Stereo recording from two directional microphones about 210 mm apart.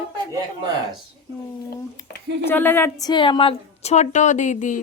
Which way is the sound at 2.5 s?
10° left (ahead or behind).